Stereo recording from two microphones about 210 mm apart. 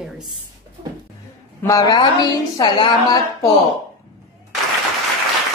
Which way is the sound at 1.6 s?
15° left (ahead or behind).